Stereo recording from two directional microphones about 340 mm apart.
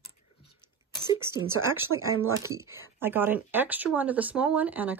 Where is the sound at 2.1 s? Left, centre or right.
Right.